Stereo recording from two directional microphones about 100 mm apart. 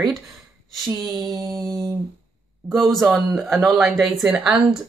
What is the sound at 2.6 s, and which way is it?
Speech, centre (ahead or behind).